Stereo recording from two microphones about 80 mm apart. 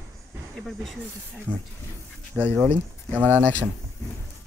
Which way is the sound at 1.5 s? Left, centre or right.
Right.